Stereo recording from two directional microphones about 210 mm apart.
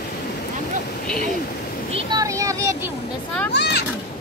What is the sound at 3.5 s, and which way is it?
Speech, 50° left (ahead or behind).